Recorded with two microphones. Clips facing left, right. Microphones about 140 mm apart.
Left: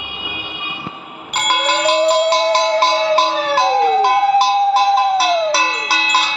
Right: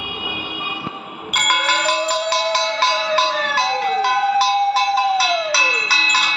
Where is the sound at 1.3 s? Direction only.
20° left (ahead or behind).